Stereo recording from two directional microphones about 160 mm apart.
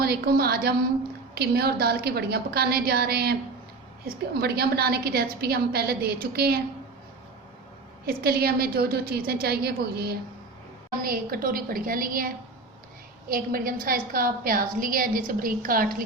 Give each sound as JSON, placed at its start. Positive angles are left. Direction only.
{"t": 0.0, "sound": "a woman's voice", "side_deg": -80}
{"t": 8.0, "sound": "a woman's voice", "side_deg": -75}
{"t": 11.0, "sound": "a woman's voice", "side_deg": -65}
{"t": 13.3, "sound": "a woman's voice", "side_deg": -65}